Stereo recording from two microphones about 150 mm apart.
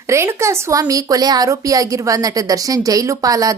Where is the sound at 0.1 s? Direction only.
20° right (ahead or behind).